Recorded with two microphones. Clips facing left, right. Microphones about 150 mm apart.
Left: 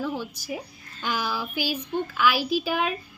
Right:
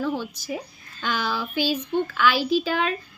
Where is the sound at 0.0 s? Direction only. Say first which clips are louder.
Right 3 dB; 10° left (ahead or behind).